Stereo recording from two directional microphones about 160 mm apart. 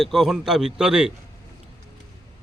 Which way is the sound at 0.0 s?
Centre (ahead or behind).